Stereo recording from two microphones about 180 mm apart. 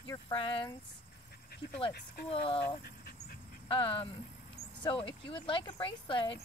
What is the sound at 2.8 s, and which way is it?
Dog, 60° left (ahead or behind).